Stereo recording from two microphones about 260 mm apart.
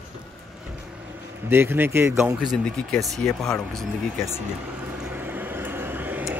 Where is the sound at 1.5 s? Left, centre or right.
Centre.